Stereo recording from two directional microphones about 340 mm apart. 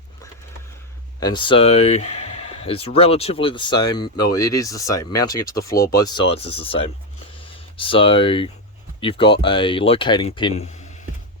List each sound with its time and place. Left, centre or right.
1.2 s speech: centre